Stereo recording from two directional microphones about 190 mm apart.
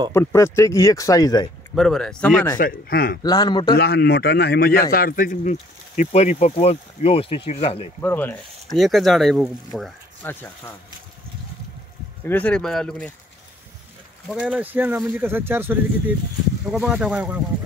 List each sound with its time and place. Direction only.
0.1 s speech: 15° left (ahead or behind)
1.8 s speech: centre (ahead or behind)
2.6 s a man's voice: 50° left (ahead or behind)
3.2 s a man's voice: 20° left (ahead or behind)
3.7 s a man's voice: 60° left (ahead or behind); by 7.9 s 30° left (ahead or behind)
8.0 s speech: 10° left (ahead or behind)
8.7 s speech: centre (ahead or behind)
12.3 s speech: 10° left (ahead or behind)
14.2 s speech: 5° right (ahead or behind)